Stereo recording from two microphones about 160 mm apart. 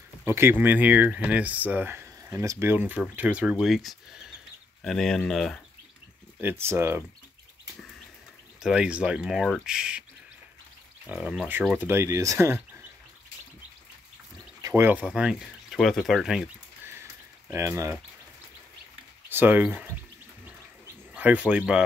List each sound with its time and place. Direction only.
0.2 s speech: 15° right (ahead or behind); by 5.6 s centre (ahead or behind)
6.4 s speech: 15° right (ahead or behind)
8.6 s speech: 5° right (ahead or behind)
11.1 s speech: 5° right (ahead or behind)
14.7 s speech: 10° right (ahead or behind)
17.5 s speech: 15° right (ahead or behind)
19.2 s speech: 15° right (ahead or behind)
20.4 s a sound: 10° right (ahead or behind)